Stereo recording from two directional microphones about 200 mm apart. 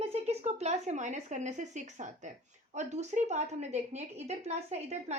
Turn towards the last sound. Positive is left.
turn(degrees=-35)  # may be behind; listen again after turning